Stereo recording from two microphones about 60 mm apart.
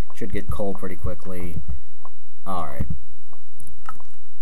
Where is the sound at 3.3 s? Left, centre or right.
Centre.